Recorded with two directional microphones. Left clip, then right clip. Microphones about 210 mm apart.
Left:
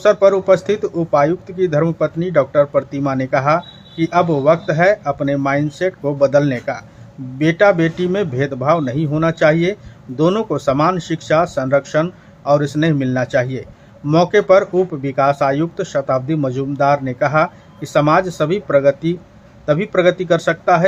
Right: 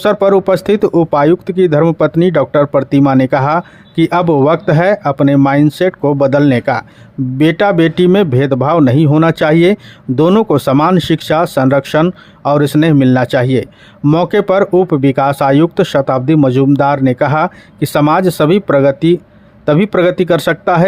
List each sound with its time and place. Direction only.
0.0 s speech: 50° right (ahead or behind)